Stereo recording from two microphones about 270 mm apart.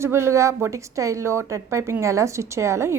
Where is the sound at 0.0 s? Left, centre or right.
Centre.